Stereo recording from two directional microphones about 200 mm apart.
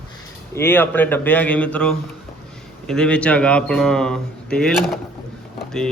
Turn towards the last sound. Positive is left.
turn(degrees=5)  # may be behind; listen again after turning